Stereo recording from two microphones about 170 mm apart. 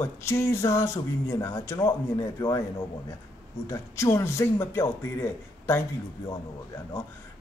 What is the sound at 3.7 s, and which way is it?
A man's voice, 15° left (ahead or behind).